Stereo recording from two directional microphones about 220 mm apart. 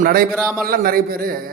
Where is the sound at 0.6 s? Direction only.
40° right (ahead or behind).